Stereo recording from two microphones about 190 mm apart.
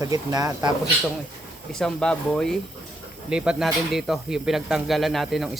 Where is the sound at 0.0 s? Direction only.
20° right (ahead or behind).